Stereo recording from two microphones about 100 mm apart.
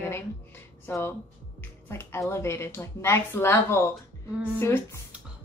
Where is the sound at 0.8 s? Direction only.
25° left (ahead or behind).